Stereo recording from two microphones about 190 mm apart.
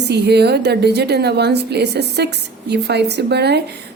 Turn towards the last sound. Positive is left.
turn(degrees=-60)  # may be behind; listen again after turning